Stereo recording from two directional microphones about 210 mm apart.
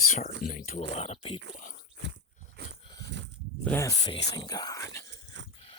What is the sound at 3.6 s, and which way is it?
Speech, 10° left (ahead or behind).